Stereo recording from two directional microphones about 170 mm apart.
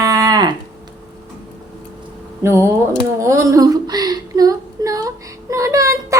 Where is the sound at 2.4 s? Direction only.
15° right (ahead or behind).